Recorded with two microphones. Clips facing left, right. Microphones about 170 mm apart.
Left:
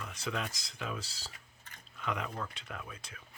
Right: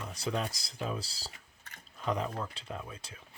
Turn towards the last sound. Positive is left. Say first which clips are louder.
# right 3 dB
turn(degrees=-30)  # may be behind; listen again after turning